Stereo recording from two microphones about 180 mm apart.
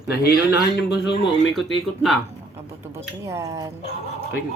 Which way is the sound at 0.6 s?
70° left (ahead or behind).